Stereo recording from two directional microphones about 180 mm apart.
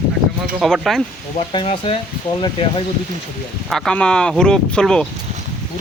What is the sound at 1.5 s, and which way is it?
Speech, 30° left (ahead or behind).